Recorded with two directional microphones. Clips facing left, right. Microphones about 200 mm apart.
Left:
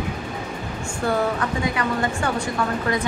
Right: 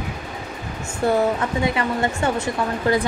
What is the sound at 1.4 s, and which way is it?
A woman's voice, 25° right (ahead or behind).